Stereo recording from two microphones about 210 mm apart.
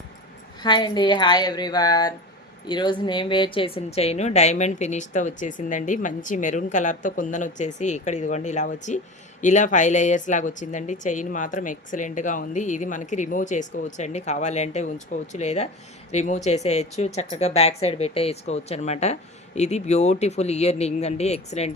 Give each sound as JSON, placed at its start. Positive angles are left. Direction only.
{"t": 0.6, "sound": "a woman's voice", "side_deg": 20}